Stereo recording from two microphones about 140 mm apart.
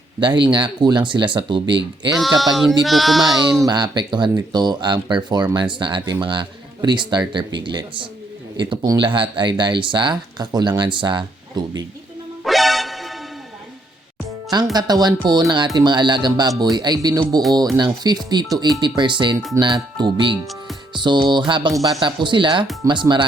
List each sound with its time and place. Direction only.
0.2 s speech: 35° right (ahead or behind)
2.1 s speech: centre (ahead or behind)
3.6 s speech: 30° right (ahead or behind)
12.5 s music: centre (ahead or behind)
14.5 s speech: 30° right (ahead or behind)